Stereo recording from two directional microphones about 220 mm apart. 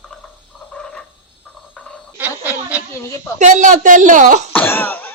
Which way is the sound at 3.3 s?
35° right (ahead or behind).